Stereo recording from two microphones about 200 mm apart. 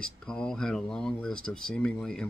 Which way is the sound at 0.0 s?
5° left (ahead or behind).